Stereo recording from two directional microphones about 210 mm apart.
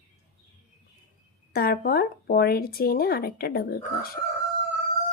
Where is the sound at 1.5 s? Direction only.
45° left (ahead or behind).